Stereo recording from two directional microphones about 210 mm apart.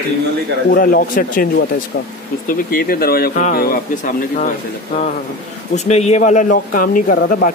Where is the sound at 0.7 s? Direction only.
45° left (ahead or behind).